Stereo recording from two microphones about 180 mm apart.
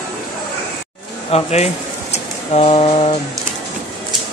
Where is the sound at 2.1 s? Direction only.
35° left (ahead or behind).